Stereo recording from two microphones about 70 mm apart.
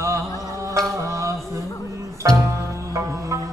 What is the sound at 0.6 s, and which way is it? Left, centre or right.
Music, right.